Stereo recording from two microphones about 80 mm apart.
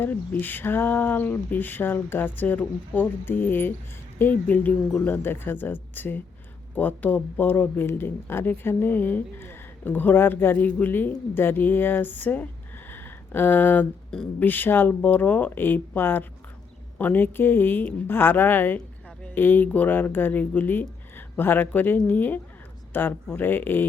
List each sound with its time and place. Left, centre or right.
0.0 s speech: left
12.9 s a sound: left
14.3 s speech: left